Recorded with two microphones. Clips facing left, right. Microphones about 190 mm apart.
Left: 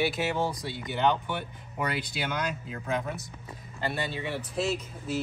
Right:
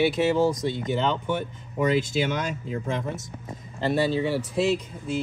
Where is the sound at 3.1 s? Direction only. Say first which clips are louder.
Right 5 dB; 45° right (ahead or behind).